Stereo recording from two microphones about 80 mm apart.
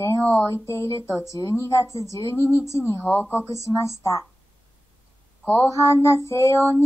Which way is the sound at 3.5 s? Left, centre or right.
Left.